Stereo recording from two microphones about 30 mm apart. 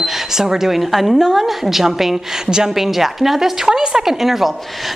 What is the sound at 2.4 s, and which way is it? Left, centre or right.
Speech, right.